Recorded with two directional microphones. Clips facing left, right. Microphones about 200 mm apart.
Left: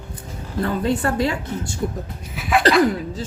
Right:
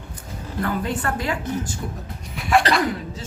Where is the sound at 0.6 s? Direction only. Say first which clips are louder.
Left 4 dB; 25° left (ahead or behind).